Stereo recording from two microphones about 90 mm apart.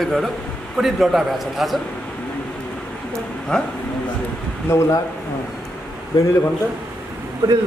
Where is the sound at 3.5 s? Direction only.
10° left (ahead or behind).